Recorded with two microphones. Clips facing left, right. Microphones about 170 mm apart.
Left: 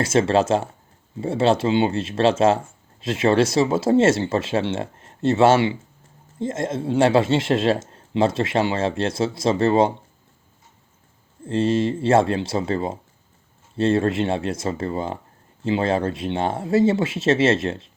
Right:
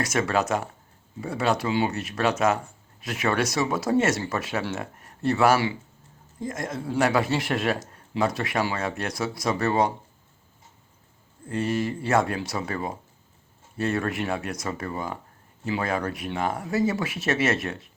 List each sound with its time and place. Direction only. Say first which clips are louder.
0.0 s speech: left 6 dB; 25° left (ahead or behind)
11.4 s speech: left 6 dB; 25° left (ahead or behind)